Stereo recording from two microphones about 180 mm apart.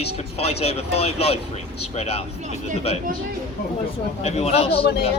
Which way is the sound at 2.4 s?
40° right (ahead or behind).